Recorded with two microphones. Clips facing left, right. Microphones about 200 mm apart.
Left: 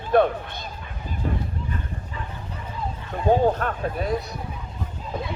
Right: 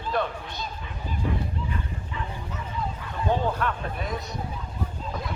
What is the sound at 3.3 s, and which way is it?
Speech, 45° left (ahead or behind).